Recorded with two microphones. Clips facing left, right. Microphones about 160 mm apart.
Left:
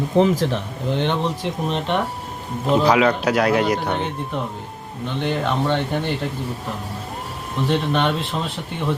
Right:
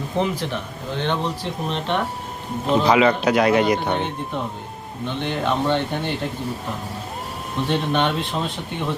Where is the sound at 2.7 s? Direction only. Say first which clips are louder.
Even; 5° left (ahead or behind).